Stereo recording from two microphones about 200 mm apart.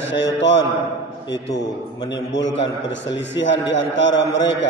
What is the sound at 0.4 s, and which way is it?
Speech, 65° left (ahead or behind).